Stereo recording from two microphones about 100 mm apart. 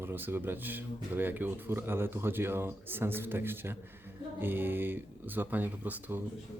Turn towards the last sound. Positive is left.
turn(degrees=-20)  # may be behind; listen again after turning